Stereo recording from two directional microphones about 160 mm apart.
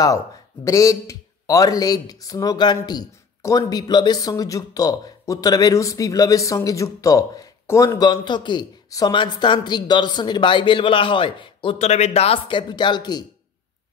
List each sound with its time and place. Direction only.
0.7 s speech: 20° left (ahead or behind)